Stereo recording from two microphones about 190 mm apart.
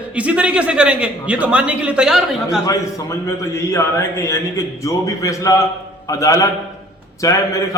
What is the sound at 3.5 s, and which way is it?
A man's voice, 15° left (ahead or behind).